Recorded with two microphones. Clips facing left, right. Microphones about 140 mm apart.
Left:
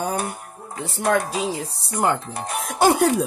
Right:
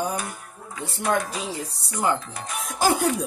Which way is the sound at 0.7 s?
50° left (ahead or behind).